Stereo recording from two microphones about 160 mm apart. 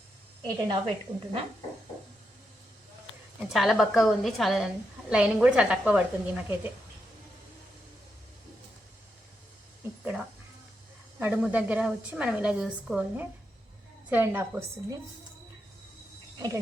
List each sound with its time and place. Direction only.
0.4 s a woman's voice: 30° right (ahead or behind)
3.5 s a woman's voice: centre (ahead or behind)
11.2 s a woman's voice: 10° right (ahead or behind)